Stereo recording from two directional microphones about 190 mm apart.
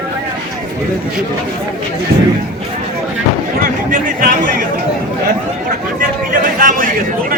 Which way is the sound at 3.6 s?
45° right (ahead or behind).